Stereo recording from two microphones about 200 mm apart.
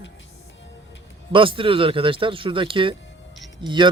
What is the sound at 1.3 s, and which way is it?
Speech, 25° right (ahead or behind).